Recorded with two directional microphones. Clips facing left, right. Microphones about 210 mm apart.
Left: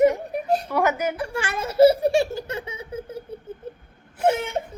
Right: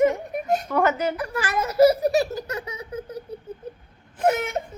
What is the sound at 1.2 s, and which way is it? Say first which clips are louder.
Giggle: right 1 dB; 30° left (ahead or behind).